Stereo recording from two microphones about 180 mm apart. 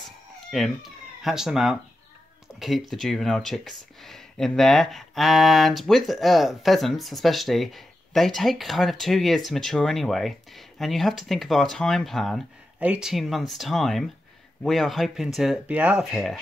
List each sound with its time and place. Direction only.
0.5 s speech: centre (ahead or behind)